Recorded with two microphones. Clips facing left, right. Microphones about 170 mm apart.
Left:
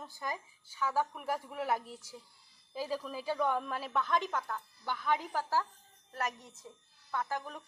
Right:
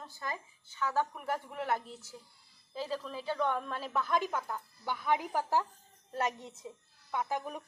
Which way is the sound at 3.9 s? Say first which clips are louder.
Right 1 dB; 5° right (ahead or behind).